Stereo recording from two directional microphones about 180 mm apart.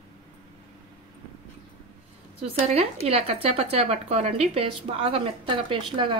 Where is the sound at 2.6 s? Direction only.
35° right (ahead or behind).